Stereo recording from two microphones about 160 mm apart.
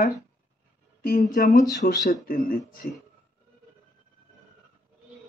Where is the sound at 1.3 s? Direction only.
55° left (ahead or behind).